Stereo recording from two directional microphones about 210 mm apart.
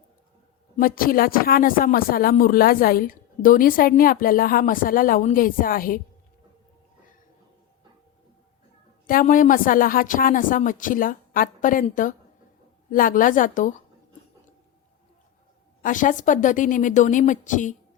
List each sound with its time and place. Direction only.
0.8 s speech: 45° left (ahead or behind)
9.0 s speech: 40° left (ahead or behind)
15.8 s speech: 40° left (ahead or behind)